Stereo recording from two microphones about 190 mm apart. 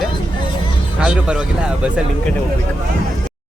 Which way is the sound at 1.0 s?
5° right (ahead or behind).